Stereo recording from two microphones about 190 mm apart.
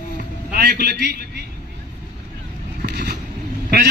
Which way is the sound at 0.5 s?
55° right (ahead or behind).